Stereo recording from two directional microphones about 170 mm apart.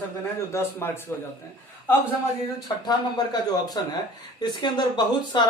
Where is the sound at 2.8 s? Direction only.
25° left (ahead or behind).